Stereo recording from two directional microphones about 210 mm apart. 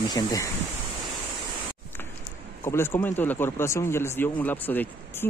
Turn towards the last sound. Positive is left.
turn(degrees=10)  # may be behind; listen again after turning